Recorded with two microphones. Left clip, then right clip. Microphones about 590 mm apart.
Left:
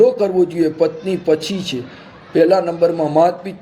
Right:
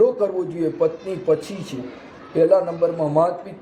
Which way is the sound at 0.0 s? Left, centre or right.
Left.